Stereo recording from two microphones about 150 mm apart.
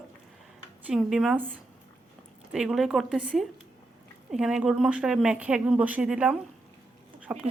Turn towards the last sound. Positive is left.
turn(degrees=-5)  # may be behind; listen again after turning